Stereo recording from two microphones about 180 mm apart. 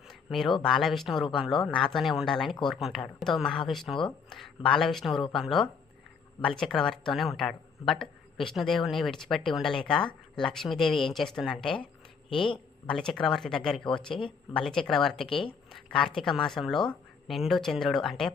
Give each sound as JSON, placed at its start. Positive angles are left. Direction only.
{"t": 0.1, "sound": "a sound", "side_deg": 0}
{"t": 0.6, "sound": "speech", "side_deg": 0}
{"t": 12.9, "sound": "speech", "side_deg": 5}
{"t": 15.3, "sound": "speech", "side_deg": 30}
{"t": 15.7, "sound": "speech", "side_deg": 0}